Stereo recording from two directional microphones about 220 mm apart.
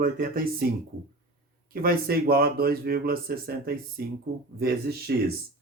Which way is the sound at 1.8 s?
45° right (ahead or behind).